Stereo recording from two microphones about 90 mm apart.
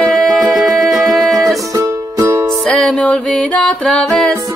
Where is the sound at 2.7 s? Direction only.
5° left (ahead or behind).